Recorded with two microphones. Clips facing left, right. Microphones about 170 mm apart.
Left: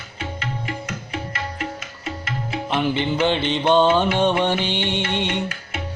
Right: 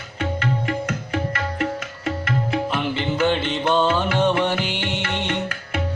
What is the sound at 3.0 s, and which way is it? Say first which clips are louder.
Music: even; 25° left (ahead or behind).